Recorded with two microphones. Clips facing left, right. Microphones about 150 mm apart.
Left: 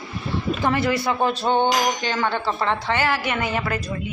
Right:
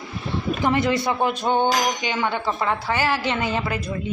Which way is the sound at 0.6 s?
20° right (ahead or behind).